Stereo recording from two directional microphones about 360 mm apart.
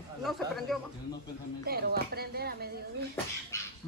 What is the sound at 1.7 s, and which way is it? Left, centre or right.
Speech, right.